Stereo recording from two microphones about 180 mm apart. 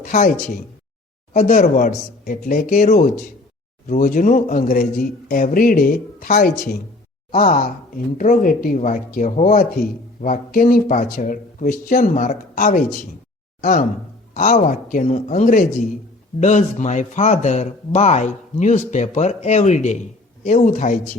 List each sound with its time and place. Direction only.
0.0 s speech: 45° left (ahead or behind)
1.3 s speech: 45° left (ahead or behind)